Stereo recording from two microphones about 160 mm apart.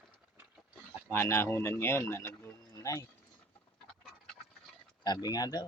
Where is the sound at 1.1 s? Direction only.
15° left (ahead or behind).